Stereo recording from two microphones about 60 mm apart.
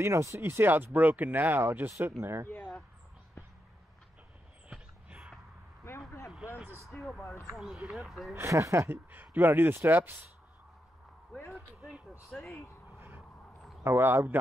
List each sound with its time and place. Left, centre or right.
0.0 s speech: right
0.4 s speech: right
2.4 s a sound: left
5.9 s a sound: left
6.9 s a sound: centre
7.5 s speech: centre
8.5 s speech: right
12.4 s speech: centre
13.8 s speech: right